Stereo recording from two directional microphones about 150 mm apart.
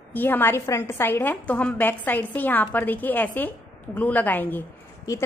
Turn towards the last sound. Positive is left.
turn(degrees=15)  # may be behind; listen again after turning